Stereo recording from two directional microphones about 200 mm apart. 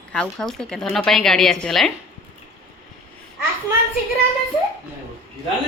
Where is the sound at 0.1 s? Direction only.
5° left (ahead or behind).